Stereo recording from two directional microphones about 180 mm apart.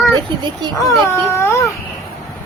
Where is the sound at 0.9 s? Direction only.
15° left (ahead or behind).